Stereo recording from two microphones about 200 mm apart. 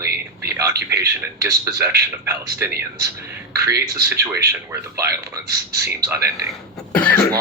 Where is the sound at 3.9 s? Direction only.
15° right (ahead or behind).